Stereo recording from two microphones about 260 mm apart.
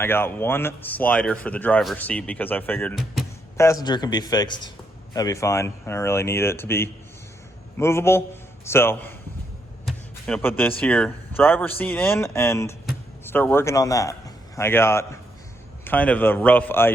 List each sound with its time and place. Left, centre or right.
0.0 s speech: centre
3.6 s a man's voice: centre
9.8 s a sound: centre
10.6 s a man's voice: centre